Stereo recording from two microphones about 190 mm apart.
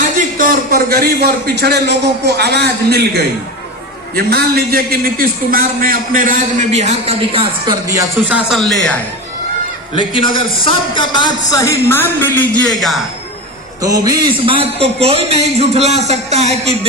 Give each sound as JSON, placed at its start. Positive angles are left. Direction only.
{"t": 0.3, "sound": "a man's voice", "side_deg": -50}
{"t": 8.4, "sound": "speech", "side_deg": 0}
{"t": 9.9, "sound": "a man's voice", "side_deg": 25}
{"t": 13.8, "sound": "a man's voice", "side_deg": -20}